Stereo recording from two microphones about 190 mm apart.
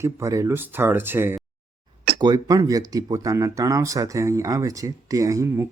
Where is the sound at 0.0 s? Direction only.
15° right (ahead or behind).